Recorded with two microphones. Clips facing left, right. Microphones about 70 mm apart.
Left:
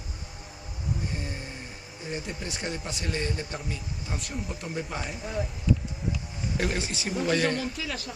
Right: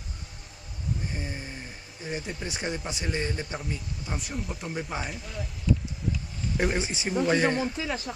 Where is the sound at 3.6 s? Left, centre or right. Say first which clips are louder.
Right 1 dB; centre.